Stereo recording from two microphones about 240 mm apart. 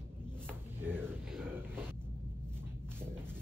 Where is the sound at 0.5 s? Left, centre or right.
Centre.